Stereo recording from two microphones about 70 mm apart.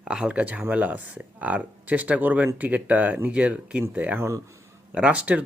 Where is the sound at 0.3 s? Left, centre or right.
Centre.